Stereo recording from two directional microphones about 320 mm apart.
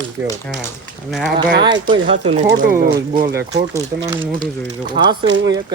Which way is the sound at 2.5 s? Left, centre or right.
Right.